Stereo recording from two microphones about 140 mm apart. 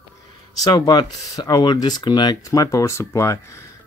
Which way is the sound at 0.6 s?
30° left (ahead or behind).